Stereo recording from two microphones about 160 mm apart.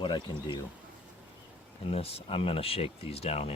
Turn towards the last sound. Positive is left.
turn(degrees=40)  # may be behind; listen again after turning